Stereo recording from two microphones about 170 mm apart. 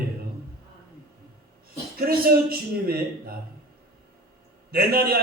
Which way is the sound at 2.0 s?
60° right (ahead or behind).